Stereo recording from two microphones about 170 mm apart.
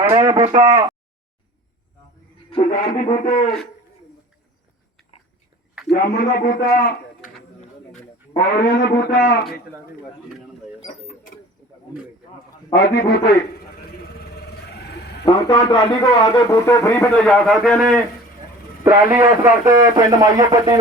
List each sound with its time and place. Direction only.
0.1 s a sound: 25° right (ahead or behind)
2.6 s music: 50° left (ahead or behind)
5.9 s a man's voice: 70° left (ahead or behind)
8.5 s a man's voice: 70° left (ahead or behind)
10.8 s mechanisms: 55° left (ahead or behind)
12.7 s a man's voice: 70° left (ahead or behind)
14.0 s vehicle: 70° left (ahead or behind)
15.2 s a man's voice: 25° left (ahead or behind)
17.2 s a man's voice: 5° left (ahead or behind)
19.1 s speech: 15° right (ahead or behind)